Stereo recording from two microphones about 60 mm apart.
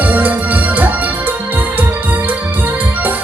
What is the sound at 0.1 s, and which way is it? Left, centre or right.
Music, right.